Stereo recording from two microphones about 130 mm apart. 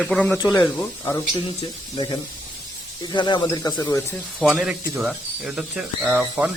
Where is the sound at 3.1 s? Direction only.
35° left (ahead or behind).